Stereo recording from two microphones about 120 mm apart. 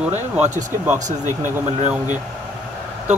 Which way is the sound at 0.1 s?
75° right (ahead or behind).